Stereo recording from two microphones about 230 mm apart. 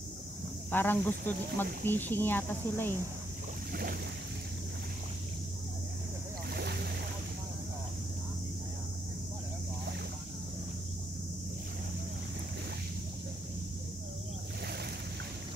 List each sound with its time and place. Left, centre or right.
0.7 s speech: centre
6.5 s boat: right